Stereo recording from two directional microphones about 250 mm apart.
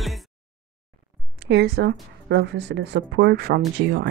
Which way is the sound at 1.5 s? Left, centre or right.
Right.